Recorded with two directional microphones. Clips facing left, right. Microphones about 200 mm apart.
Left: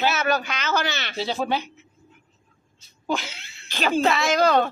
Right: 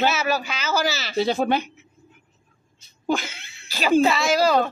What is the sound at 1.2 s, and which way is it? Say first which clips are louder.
Speech: right 5 dB; 55° right (ahead or behind).